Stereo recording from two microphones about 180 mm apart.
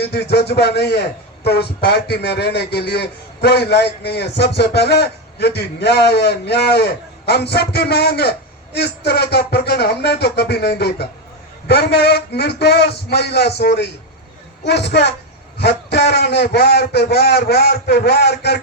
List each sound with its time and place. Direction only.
0.0 s a man's voice: 65° left (ahead or behind)